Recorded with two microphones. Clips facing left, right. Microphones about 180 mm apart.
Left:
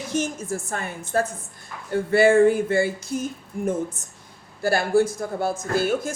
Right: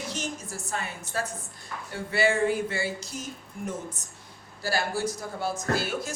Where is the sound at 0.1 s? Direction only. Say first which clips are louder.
Left 9 dB; 50° left (ahead or behind).